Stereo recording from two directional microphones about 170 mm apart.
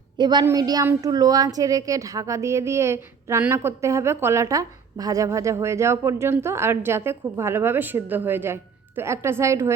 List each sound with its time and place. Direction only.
0.2 s a woman's voice: 25° right (ahead or behind)